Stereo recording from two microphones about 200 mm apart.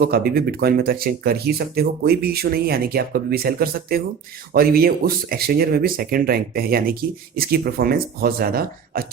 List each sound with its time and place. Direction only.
0.0 s speech: 50° right (ahead or behind)